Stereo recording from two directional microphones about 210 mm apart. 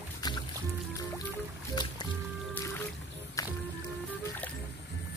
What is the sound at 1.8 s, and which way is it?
Music, 20° left (ahead or behind).